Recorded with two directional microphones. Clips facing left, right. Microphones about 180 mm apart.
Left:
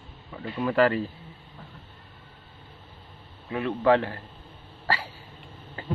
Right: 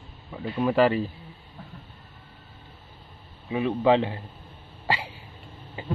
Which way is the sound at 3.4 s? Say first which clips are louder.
Right 1 dB; 15° right (ahead or behind).